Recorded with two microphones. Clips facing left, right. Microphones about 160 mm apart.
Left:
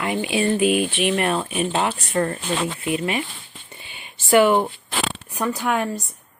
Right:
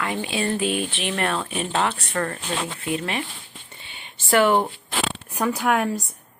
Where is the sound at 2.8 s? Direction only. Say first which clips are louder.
Left 3 dB; 10° left (ahead or behind).